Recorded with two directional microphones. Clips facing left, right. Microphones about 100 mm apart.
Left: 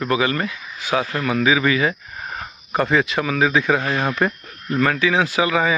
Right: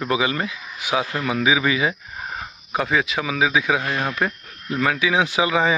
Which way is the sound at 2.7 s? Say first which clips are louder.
Left 3 dB; 5° right (ahead or behind).